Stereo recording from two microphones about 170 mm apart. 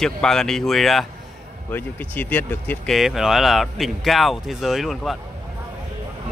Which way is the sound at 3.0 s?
Centre (ahead or behind).